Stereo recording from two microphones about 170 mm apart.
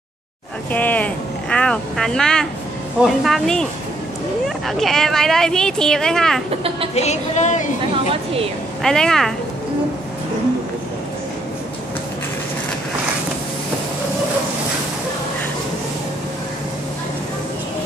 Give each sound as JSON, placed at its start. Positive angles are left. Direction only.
{"t": 0.7, "sound": "speech", "side_deg": 10}
{"t": 4.6, "sound": "speech", "side_deg": 0}
{"t": 7.0, "sound": "a woman's voice", "side_deg": 45}
{"t": 8.8, "sound": "speech", "side_deg": 5}